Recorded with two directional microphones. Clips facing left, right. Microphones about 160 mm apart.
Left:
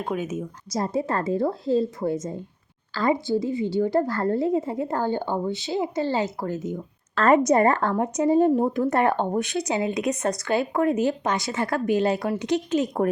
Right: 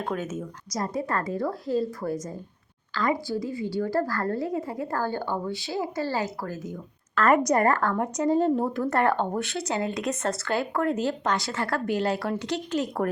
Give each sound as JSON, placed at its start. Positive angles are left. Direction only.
{"t": 0.0, "sound": "speech", "side_deg": 10}
{"t": 0.7, "sound": "speech", "side_deg": 25}